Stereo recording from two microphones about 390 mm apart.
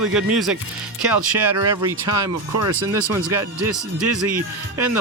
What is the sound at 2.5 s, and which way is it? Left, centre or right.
Speech, right.